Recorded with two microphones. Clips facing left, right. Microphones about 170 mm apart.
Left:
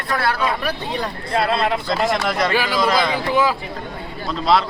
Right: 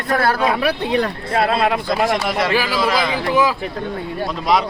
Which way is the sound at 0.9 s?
55° right (ahead or behind).